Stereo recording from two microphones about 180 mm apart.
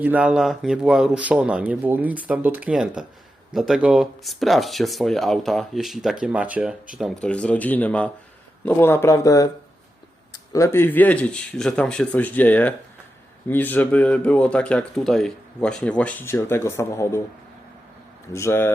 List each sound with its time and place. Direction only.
0.0 s speech: 10° right (ahead or behind); by 17.2 s 15° left (ahead or behind)
18.3 s speech: 15° left (ahead or behind)